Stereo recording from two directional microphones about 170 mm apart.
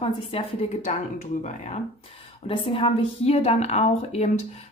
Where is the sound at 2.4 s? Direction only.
30° left (ahead or behind).